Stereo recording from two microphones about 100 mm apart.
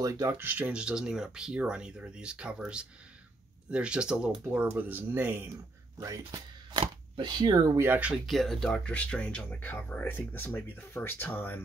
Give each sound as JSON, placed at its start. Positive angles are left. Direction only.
{"t": 0.0, "sound": "speech", "side_deg": -35}
{"t": 0.4, "sound": "speech", "side_deg": -15}
{"t": 6.8, "sound": "speech", "side_deg": -50}
{"t": 7.7, "sound": "speech", "side_deg": -20}
{"t": 8.3, "sound": "speech", "side_deg": 0}